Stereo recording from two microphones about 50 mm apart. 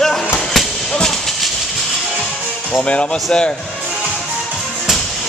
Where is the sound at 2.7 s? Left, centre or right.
Left.